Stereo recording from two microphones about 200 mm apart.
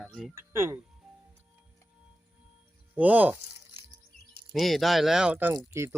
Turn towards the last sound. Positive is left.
turn(degrees=-15)  # may be behind; listen again after turning